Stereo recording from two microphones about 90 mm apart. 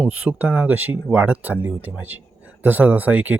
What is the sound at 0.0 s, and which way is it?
Speech, 15° right (ahead or behind).